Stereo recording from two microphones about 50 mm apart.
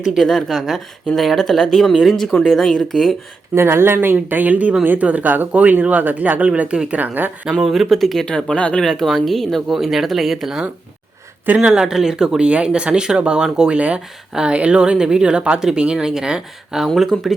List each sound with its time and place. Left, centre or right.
0.2 s speech: centre
3.5 s speech: right
6.5 s speech: right
7.0 s speech: right
7.6 s speech: centre
8.5 s speech: left
8.8 s speech: centre
13.7 s speech: right
16.8 s speech: centre